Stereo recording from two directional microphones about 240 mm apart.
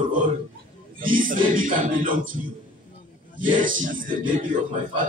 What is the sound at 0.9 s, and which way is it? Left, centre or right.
A man's voice, right.